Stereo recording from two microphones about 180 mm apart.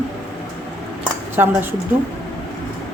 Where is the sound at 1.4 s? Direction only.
10° right (ahead or behind).